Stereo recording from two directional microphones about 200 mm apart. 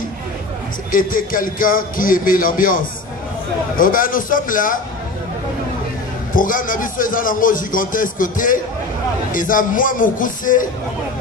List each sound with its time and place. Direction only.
0.9 s a man's voice: 45° left (ahead or behind)
6.3 s a man's voice: 45° left (ahead or behind)